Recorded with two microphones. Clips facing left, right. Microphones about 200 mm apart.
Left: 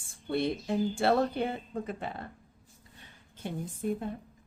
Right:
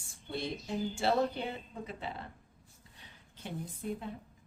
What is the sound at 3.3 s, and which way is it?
Speech, 45° left (ahead or behind).